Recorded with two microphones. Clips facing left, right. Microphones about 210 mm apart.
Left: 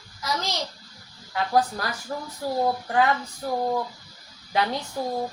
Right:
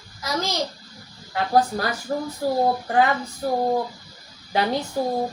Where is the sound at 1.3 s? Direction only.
30° right (ahead or behind).